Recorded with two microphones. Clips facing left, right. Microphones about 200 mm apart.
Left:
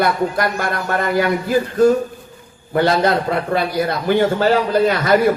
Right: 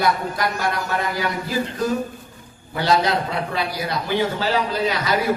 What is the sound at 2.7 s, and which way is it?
A man's voice, 55° left (ahead or behind).